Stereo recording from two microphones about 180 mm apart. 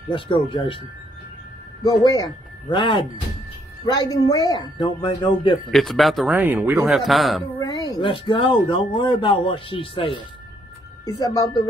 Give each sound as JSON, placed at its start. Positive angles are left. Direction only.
{"t": 0.1, "sound": "speech", "side_deg": 30}
{"t": 1.9, "sound": "speech", "side_deg": 20}
{"t": 5.7, "sound": "speech", "side_deg": 0}
{"t": 6.9, "sound": "speech", "side_deg": 0}
{"t": 7.5, "sound": "speech", "side_deg": 25}